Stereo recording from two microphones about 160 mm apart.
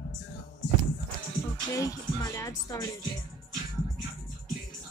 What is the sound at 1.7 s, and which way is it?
A woman's voice, 20° left (ahead or behind).